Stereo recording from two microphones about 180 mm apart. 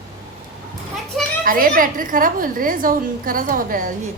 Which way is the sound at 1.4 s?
50° right (ahead or behind).